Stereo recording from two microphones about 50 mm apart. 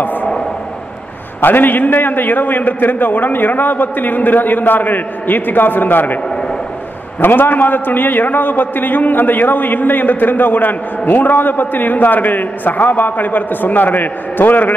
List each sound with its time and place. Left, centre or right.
0.0 s a sound: left
1.4 s a man's voice: left
7.2 s a man's voice: left